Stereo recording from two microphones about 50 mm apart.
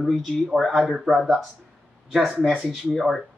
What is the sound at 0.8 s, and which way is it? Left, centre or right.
Speech, centre.